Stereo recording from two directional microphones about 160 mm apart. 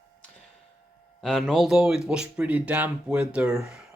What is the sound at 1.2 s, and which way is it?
Speech, 5° left (ahead or behind).